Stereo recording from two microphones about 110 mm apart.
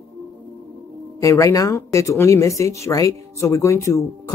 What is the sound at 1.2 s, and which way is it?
Speech, 30° left (ahead or behind).